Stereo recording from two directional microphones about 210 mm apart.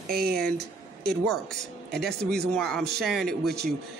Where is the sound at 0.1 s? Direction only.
45° right (ahead or behind).